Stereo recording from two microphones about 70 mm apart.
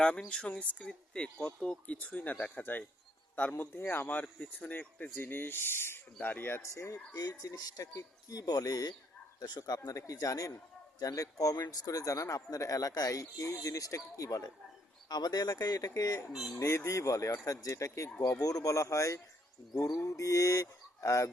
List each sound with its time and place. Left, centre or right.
0.3 s speech: centre; by 6.6 s left
6.6 s speech: left
7.1 s speech: left
15.1 s speech: left
16.6 s speech: left
18.3 s speech: left